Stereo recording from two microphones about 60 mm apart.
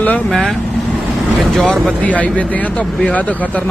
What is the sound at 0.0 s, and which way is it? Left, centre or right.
Speech, left.